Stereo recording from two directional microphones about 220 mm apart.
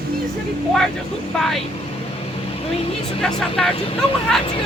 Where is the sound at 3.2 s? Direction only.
Centre (ahead or behind).